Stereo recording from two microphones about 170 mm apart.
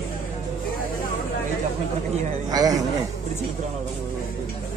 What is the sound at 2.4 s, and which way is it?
Speech, 20° right (ahead or behind).